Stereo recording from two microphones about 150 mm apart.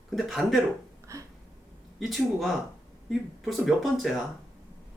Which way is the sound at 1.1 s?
20° right (ahead or behind).